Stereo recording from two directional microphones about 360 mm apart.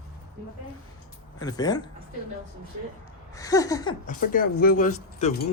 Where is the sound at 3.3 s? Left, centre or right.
Centre.